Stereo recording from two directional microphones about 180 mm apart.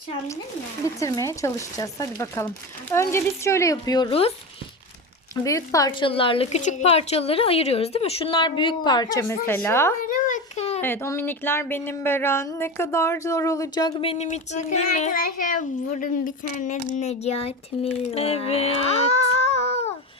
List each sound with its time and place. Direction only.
0.9 s speech: 15° left (ahead or behind)
5.3 s a woman's voice: 20° left (ahead or behind)
10.0 s a sound: 45° left (ahead or behind)
10.8 s speech: 10° left (ahead or behind); by 16.5 s 50° left (ahead or behind)
16.6 s child singing: 40° left (ahead or behind)